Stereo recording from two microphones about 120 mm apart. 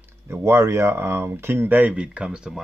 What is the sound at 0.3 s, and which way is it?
Speech, 25° right (ahead or behind).